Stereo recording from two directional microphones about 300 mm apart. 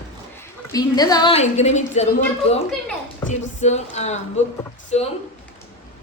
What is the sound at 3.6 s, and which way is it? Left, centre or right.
Speech, left.